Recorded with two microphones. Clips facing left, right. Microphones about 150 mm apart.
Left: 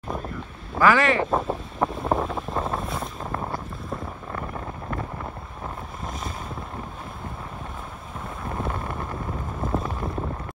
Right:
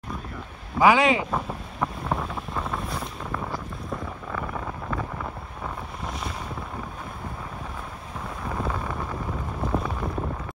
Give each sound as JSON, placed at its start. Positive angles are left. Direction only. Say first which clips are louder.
{"t": 0.7, "sound": "speech", "louder": "right 1 dB", "side_deg": -15}
{"t": 1.3, "sound": "wind noise", "louder": "left 5 dB", "side_deg": 25}
{"t": 2.5, "sound": "boat", "louder": "left 2 dB", "side_deg": 25}
{"t": 2.8, "sound": "boat", "louder": "left 2 dB", "side_deg": 0}
{"t": 3.3, "sound": "boat", "louder": "left 1 dB", "side_deg": 25}
{"t": 8.5, "sound": "wind noise", "louder": "even", "side_deg": 5}
{"t": 9.6, "sound": "a sound", "louder": "even", "side_deg": 0}